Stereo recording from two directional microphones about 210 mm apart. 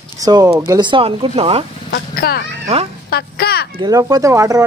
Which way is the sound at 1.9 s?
45° left (ahead or behind).